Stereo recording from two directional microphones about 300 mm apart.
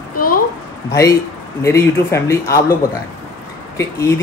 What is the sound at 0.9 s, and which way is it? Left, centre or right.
Speech, centre.